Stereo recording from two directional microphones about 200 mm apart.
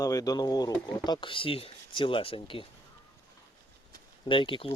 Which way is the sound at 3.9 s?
25° left (ahead or behind).